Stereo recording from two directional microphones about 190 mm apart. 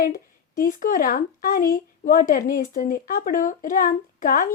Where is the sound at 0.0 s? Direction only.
45° left (ahead or behind).